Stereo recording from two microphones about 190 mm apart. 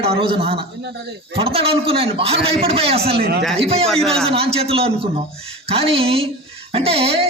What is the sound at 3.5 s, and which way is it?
Speech, 30° right (ahead or behind).